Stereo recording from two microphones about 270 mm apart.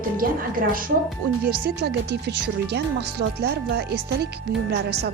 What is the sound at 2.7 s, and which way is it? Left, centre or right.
Speech, right.